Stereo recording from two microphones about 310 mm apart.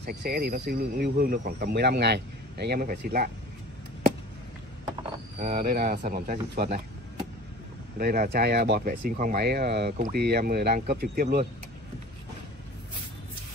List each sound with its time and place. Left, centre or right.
0.0 s speech: right
5.4 s speech: right